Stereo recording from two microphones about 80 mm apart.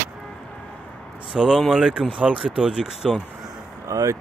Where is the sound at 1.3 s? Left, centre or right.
Centre.